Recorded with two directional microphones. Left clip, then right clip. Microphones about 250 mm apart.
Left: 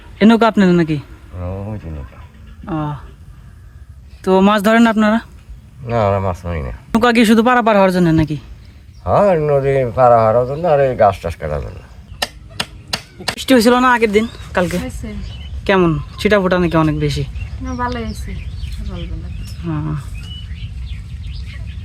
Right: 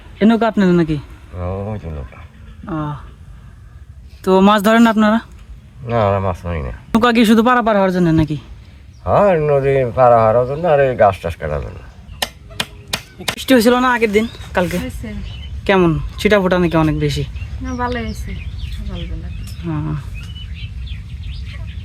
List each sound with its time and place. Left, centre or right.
0.2 s speech: centre
1.4 s a sound: right
2.6 s speech: centre
4.2 s speech: centre
12.2 s a sound: centre
13.3 s speech: centre
19.6 s speech: centre